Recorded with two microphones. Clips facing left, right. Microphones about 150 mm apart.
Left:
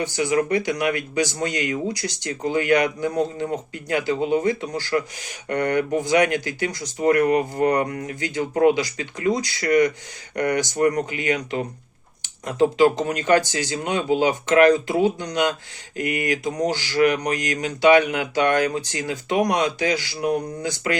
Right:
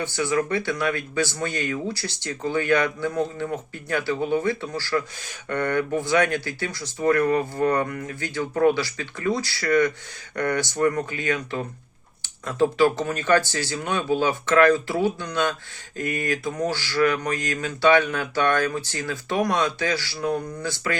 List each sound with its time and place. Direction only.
0.0 s speech: 15° left (ahead or behind)